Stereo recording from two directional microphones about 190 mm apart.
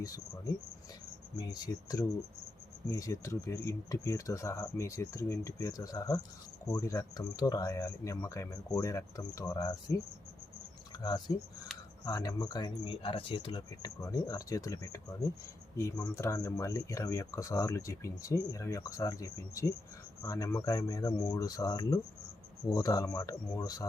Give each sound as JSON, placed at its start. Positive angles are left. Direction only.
{"t": 1.4, "sound": "speech", "side_deg": 20}
{"t": 11.0, "sound": "speech", "side_deg": 20}